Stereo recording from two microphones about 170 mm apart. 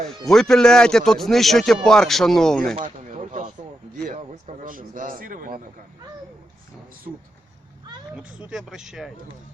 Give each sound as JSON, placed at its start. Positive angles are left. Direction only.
{"t": 0.3, "sound": "speech", "side_deg": 5}
{"t": 2.7, "sound": "a sound", "side_deg": -45}
{"t": 4.0, "sound": "a man's voice", "side_deg": -50}
{"t": 8.1, "sound": "speech", "side_deg": -5}